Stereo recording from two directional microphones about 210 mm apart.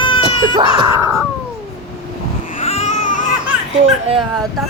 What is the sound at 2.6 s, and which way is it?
Baby cry, 30° left (ahead or behind).